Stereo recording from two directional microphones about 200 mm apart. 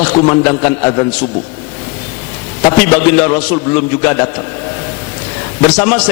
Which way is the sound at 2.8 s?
10° left (ahead or behind).